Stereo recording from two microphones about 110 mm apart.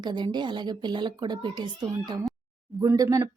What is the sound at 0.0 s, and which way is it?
A woman's voice, 40° right (ahead or behind).